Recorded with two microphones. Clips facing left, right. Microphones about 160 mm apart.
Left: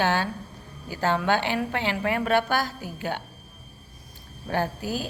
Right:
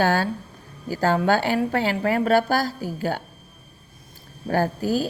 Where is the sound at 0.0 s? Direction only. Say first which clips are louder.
Right 4 dB; 40° right (ahead or behind).